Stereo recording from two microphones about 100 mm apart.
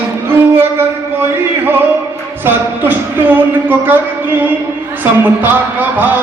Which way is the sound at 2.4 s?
20° right (ahead or behind).